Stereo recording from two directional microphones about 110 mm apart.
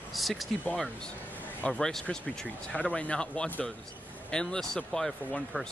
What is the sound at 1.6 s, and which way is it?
Speech, 5° left (ahead or behind).